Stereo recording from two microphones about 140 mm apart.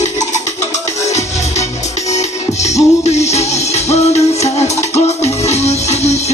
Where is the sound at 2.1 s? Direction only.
55° left (ahead or behind).